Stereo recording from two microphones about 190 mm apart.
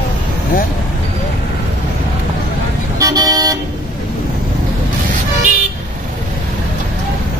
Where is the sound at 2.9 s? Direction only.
20° right (ahead or behind).